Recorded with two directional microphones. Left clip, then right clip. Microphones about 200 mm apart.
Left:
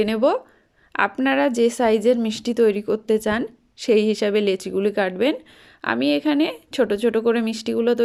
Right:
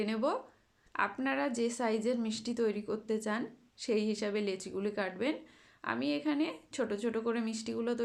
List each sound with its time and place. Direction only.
0.0 s speech: 40° left (ahead or behind)